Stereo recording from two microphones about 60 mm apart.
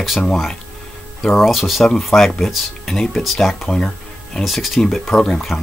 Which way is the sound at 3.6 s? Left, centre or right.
Centre.